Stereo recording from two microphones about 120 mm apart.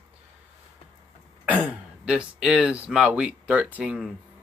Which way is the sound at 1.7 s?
10° right (ahead or behind).